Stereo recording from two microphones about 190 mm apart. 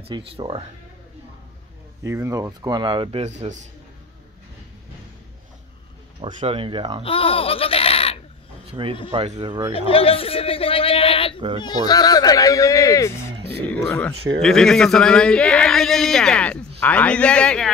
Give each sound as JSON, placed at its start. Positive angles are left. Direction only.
{"t": 0.1, "sound": "speech", "side_deg": -30}
{"t": 2.0, "sound": "speech", "side_deg": -15}
{"t": 6.2, "sound": "speech", "side_deg": -30}
{"t": 7.0, "sound": "speech", "side_deg": 30}
{"t": 8.8, "sound": "speech", "side_deg": -25}
{"t": 9.8, "sound": "speech", "side_deg": 30}